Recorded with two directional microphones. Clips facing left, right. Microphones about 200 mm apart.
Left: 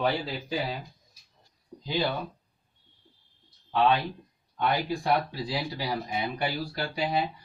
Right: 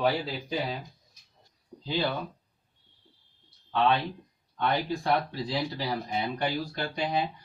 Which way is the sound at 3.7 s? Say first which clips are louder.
Left 1 dB; 15° left (ahead or behind).